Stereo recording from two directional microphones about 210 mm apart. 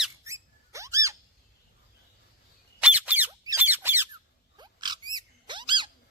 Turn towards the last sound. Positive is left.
turn(degrees=-20)  # may be behind; listen again after turning